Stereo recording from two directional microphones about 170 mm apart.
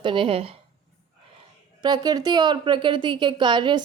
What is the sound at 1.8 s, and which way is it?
A woman's voice, 25° right (ahead or behind).